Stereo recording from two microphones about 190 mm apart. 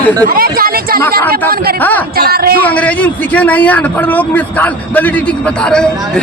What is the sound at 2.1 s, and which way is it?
Speech, 55° right (ahead or behind).